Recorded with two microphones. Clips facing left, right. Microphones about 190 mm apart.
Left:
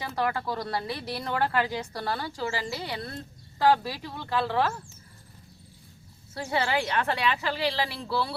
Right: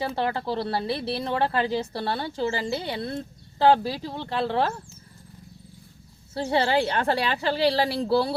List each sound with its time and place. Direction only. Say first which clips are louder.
0.0 s a woman's voice: right 2 dB; 30° right (ahead or behind)
6.3 s a woman's voice: right 5 dB; 30° right (ahead or behind)